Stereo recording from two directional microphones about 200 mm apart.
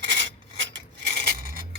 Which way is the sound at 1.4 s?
45° right (ahead or behind).